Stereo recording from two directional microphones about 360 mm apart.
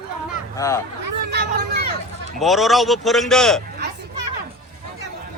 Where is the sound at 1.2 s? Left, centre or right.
Right.